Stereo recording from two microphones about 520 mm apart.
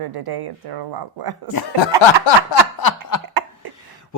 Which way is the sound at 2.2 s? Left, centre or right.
Left.